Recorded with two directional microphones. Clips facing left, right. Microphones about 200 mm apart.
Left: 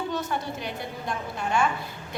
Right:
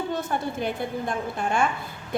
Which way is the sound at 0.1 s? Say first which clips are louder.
Right 2 dB; 50° right (ahead or behind).